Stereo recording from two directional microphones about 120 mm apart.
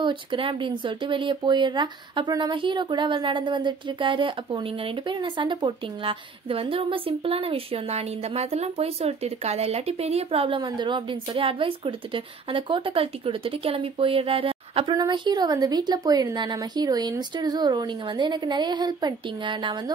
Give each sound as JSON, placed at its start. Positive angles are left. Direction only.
{"t": 0.0, "sound": "a woman's voice", "side_deg": -45}
{"t": 15.0, "sound": "speech", "side_deg": -35}